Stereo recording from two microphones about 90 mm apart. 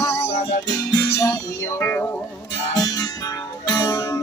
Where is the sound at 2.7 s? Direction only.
50° left (ahead or behind).